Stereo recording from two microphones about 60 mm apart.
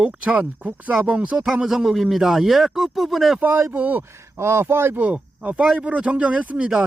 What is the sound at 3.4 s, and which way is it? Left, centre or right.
Speech, right.